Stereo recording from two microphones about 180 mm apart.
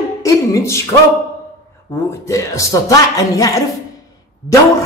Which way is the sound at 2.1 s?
15° left (ahead or behind).